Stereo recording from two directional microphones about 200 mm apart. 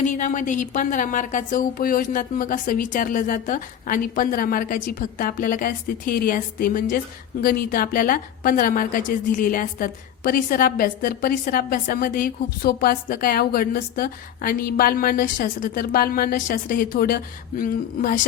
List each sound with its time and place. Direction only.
0.0 s a woman's voice: 40° left (ahead or behind)